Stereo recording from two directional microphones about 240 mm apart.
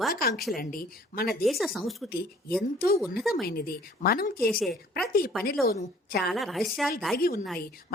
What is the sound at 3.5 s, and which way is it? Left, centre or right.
Speech, left.